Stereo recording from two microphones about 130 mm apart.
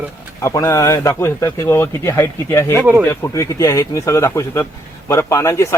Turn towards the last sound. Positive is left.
turn(degrees=20)  # may be behind; listen again after turning